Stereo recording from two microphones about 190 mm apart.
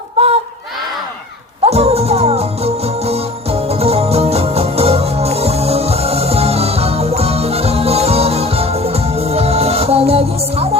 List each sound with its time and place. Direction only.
0.2 s crowd: 35° right (ahead or behind)
1.6 s music: 35° right (ahead or behind)